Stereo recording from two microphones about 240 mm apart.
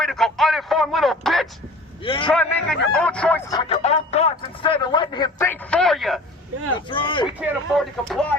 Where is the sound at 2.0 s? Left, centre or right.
Left.